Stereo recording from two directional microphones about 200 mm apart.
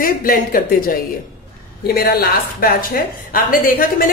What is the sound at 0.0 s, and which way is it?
Speech, 45° left (ahead or behind).